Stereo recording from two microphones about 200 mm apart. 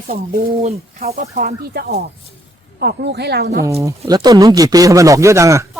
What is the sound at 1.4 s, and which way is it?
Speech, 50° right (ahead or behind).